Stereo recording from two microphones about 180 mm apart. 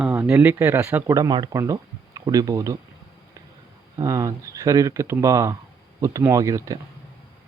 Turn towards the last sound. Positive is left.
turn(degrees=-20)  # may be behind; listen again after turning